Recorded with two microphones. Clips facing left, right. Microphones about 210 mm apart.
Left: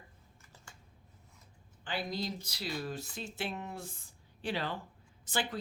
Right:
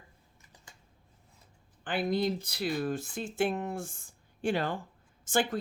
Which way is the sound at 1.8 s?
55° right (ahead or behind).